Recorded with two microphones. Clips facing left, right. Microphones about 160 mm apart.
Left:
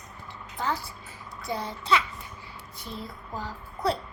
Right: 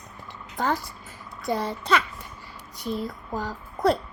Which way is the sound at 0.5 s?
50° right (ahead or behind).